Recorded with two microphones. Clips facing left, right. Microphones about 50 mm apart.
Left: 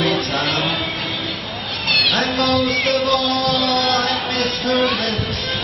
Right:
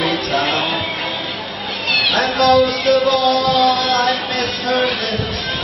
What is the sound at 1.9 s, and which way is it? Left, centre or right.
Cat, centre.